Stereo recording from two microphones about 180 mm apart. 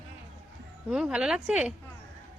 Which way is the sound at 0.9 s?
5° right (ahead or behind).